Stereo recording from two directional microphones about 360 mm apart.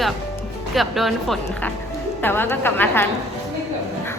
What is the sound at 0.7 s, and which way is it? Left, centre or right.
A woman's voice, centre.